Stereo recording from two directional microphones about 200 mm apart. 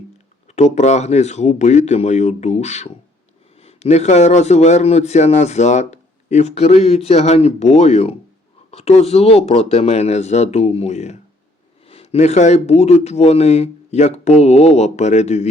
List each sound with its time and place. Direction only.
0.5 s a man's voice: 35° left (ahead or behind)